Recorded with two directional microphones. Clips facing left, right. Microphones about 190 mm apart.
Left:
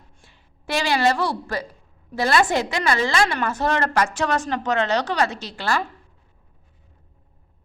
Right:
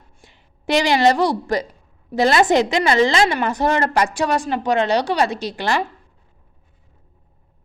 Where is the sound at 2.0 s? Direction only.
20° right (ahead or behind).